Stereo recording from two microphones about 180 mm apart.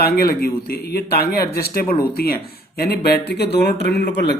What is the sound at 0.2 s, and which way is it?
Speech, 55° left (ahead or behind).